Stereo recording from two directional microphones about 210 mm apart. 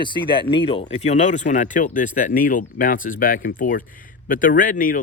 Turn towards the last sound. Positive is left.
turn(degrees=40)  # may be behind; listen again after turning